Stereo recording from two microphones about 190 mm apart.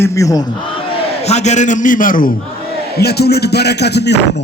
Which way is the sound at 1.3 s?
35° left (ahead or behind).